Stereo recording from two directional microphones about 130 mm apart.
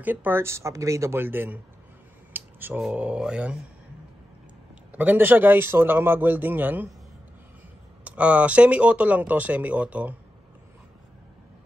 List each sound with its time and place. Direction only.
0.0 s speech: 15° right (ahead or behind)
4.9 s speech: 15° right (ahead or behind)
8.0 s speech: 10° right (ahead or behind)